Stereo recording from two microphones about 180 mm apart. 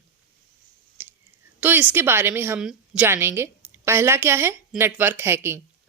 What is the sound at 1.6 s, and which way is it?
A woman's voice, 10° right (ahead or behind).